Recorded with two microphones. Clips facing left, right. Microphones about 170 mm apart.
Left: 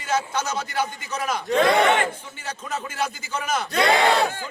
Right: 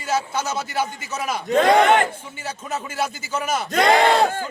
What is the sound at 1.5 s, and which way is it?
Battle cry, 45° right (ahead or behind).